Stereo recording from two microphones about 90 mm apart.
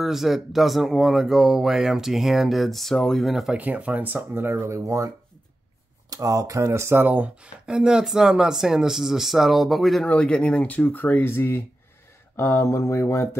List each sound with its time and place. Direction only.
0.0 s speech: 5° right (ahead or behind)
3.5 s speech: 15° right (ahead or behind)
4.5 s speech: 30° right (ahead or behind); by 10.0 s centre (ahead or behind)
10.0 s speech: 10° left (ahead or behind); by 13.4 s 30° left (ahead or behind)